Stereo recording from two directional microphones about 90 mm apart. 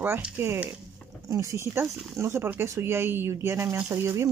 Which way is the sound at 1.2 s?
35° right (ahead or behind).